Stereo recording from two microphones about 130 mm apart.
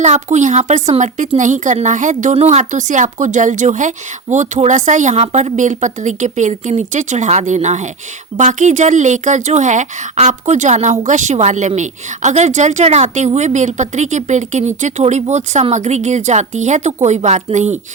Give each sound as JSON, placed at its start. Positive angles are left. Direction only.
{"t": 0.0, "sound": "a woman's voice", "side_deg": -65}